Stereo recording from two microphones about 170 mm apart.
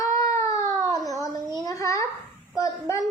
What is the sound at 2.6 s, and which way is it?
Speech, 20° left (ahead or behind).